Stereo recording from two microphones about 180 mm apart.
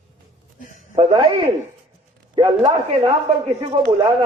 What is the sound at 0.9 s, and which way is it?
A man's voice, 30° right (ahead or behind).